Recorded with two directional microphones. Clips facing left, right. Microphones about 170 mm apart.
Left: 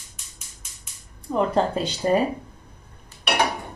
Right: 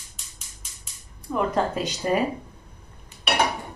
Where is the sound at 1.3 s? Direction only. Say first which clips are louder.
Left 3 dB; 30° left (ahead or behind).